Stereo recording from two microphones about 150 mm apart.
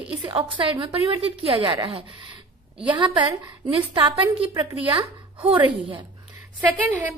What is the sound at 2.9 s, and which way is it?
A woman's voice, 30° right (ahead or behind).